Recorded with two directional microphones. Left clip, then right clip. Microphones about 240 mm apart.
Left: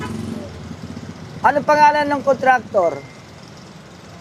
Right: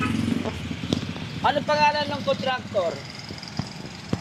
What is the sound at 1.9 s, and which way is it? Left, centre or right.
Speech, left.